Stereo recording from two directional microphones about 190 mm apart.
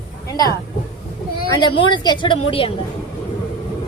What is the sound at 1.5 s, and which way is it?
A woman's voice, 25° left (ahead or behind).